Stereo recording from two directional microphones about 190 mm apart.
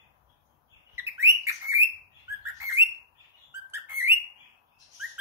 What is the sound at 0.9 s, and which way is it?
Bird, 15° right (ahead or behind).